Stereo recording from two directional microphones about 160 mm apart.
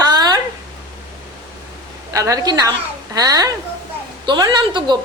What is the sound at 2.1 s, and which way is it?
A woman's voice, 20° right (ahead or behind).